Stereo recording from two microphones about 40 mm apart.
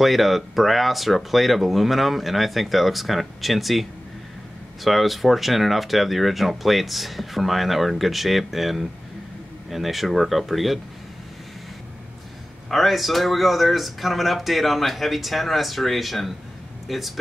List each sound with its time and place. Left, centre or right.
0.0 s speech: centre
4.8 s speech: centre
12.6 s speech: centre